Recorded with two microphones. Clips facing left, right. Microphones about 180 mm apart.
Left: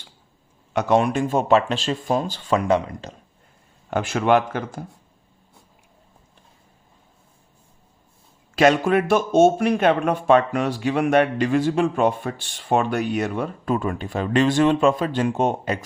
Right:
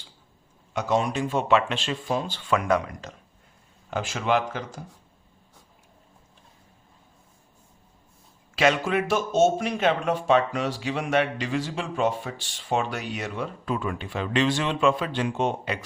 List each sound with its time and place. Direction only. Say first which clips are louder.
0.7 s speech: left 6 dB; 65° left (ahead or behind); by 3.1 s 30° left (ahead or behind)
3.8 s speech: left 6 dB; 60° left (ahead or behind)
8.5 s speech: left 6 dB; 45° left (ahead or behind)